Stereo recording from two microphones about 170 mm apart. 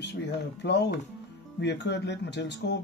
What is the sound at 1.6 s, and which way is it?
Speech, 90° left.